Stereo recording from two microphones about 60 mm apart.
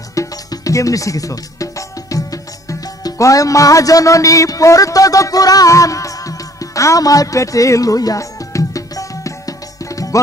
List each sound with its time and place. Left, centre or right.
0.1 s music: left